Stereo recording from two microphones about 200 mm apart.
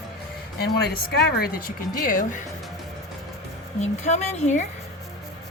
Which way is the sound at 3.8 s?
35° left (ahead or behind).